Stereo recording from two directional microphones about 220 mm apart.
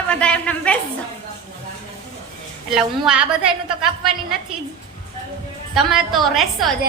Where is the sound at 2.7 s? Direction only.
Centre (ahead or behind).